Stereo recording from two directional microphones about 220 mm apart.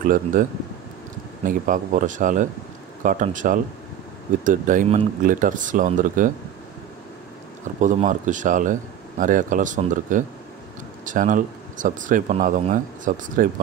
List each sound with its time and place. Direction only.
0.0 s speech: 40° right (ahead or behind)
7.8 s speech: 35° right (ahead or behind)